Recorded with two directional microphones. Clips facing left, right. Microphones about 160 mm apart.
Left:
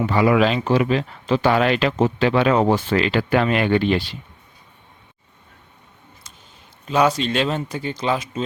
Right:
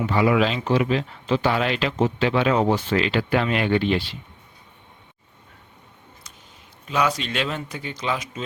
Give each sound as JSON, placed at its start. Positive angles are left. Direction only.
{"t": 0.0, "sound": "speech", "side_deg": 50}
{"t": 6.8, "sound": "speech", "side_deg": 35}